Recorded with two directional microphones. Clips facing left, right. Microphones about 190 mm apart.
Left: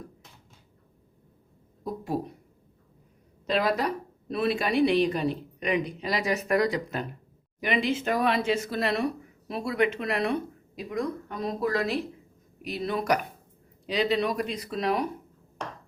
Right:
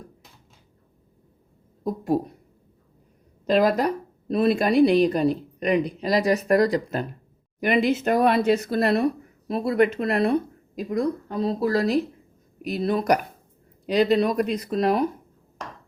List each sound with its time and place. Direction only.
3.4 s a woman's voice: 45° right (ahead or behind)